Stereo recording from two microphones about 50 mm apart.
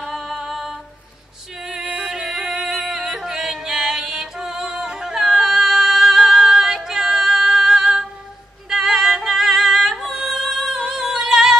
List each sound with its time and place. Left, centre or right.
0.0 s music: centre
1.8 s music: right
2.1 s music: centre
10.3 s yodeling: centre
11.0 s singing: centre